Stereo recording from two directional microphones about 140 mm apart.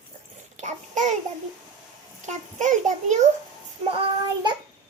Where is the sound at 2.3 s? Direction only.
60° right (ahead or behind).